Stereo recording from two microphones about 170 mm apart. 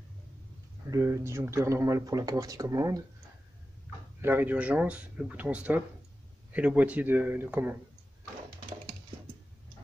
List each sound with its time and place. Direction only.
0.8 s speech: 15° right (ahead or behind)
4.2 s speech: 10° right (ahead or behind)